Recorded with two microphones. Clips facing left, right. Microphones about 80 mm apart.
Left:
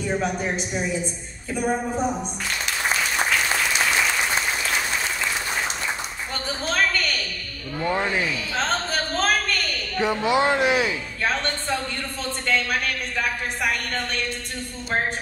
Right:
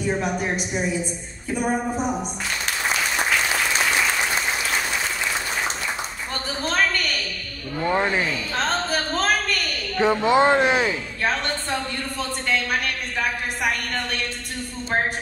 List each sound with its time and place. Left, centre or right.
0.2 s speech: centre
7.8 s speech: right
8.5 s a sound: centre
9.9 s speech: right